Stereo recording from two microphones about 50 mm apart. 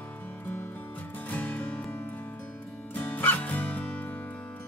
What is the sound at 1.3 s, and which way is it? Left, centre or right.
Music, left.